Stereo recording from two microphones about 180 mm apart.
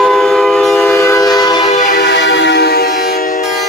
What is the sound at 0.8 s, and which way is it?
Train, 15° left (ahead or behind).